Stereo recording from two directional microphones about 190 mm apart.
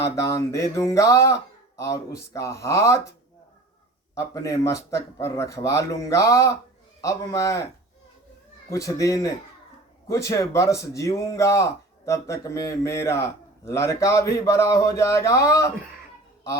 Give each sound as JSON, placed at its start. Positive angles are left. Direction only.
{"t": 0.0, "sound": "speech", "side_deg": 15}
{"t": 4.1, "sound": "speech", "side_deg": 15}
{"t": 8.7, "sound": "speech", "side_deg": 15}